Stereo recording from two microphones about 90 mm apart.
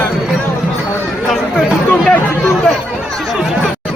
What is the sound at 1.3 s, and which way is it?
Chatter, 5° left (ahead or behind).